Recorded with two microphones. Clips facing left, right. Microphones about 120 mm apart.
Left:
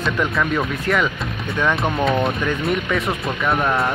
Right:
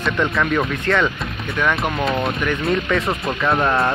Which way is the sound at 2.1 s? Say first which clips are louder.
Left 1 dB; centre (ahead or behind).